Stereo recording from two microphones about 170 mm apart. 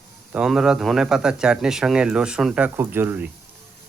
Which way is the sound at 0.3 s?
5° right (ahead or behind).